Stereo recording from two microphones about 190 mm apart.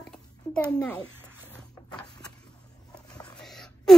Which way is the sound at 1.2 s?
10° right (ahead or behind).